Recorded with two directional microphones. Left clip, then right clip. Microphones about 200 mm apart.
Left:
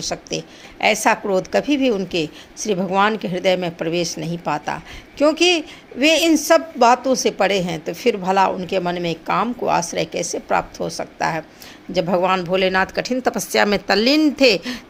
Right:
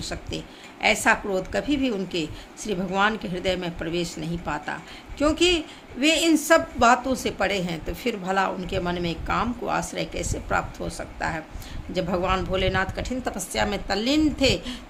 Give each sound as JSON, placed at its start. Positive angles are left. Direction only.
{"t": 0.1, "sound": "a woman's voice", "side_deg": 30}